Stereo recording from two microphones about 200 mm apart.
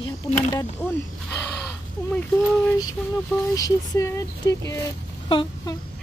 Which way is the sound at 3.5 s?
15° left (ahead or behind).